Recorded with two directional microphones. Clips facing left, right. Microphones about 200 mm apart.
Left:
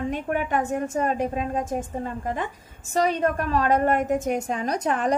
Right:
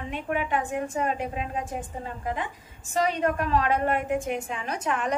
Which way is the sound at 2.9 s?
40° left (ahead or behind).